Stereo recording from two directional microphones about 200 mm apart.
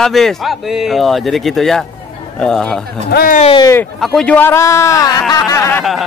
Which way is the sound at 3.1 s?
50° left (ahead or behind).